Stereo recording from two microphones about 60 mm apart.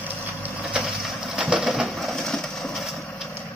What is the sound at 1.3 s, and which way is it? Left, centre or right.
Pigeon, centre.